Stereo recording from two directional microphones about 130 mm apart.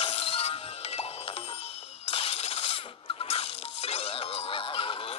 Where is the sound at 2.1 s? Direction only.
50° left (ahead or behind).